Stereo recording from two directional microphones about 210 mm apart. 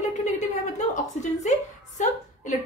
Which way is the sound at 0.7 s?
35° left (ahead or behind).